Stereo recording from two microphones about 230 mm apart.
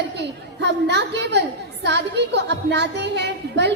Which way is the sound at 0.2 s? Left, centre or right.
Right.